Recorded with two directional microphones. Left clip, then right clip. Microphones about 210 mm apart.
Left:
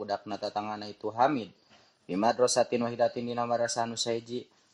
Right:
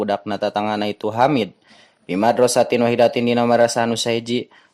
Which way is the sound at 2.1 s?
15° right (ahead or behind).